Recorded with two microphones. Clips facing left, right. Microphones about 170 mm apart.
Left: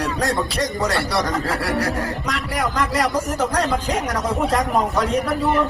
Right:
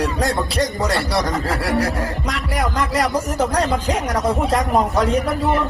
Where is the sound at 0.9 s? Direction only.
30° right (ahead or behind).